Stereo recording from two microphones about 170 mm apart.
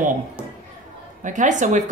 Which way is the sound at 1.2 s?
50° right (ahead or behind).